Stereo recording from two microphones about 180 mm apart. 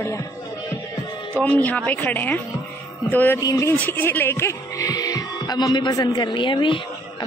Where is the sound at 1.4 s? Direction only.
10° left (ahead or behind).